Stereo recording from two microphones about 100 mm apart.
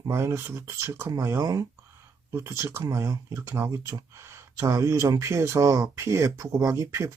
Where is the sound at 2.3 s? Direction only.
25° right (ahead or behind).